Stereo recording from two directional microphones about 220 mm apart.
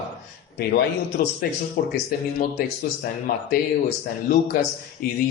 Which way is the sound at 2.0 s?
45° left (ahead or behind).